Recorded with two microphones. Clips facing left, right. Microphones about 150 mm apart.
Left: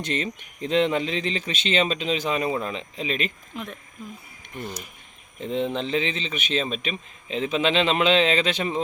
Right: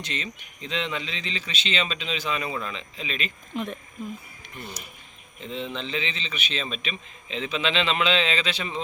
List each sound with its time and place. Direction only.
0.0 s a man's voice: 50° left (ahead or behind)
3.5 s speech: centre (ahead or behind)
5.4 s a man's voice: 55° left (ahead or behind)